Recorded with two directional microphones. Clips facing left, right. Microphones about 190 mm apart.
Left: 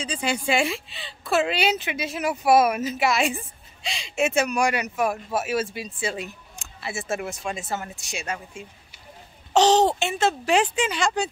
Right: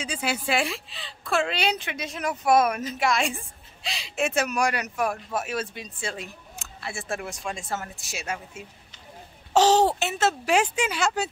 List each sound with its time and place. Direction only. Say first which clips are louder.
0.0 s speech: left 2 dB; 5° right (ahead or behind)